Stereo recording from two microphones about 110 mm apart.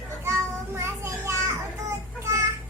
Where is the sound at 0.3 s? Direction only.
25° right (ahead or behind).